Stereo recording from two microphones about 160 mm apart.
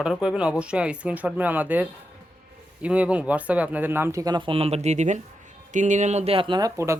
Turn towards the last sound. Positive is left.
turn(degrees=-20)  # may be behind; listen again after turning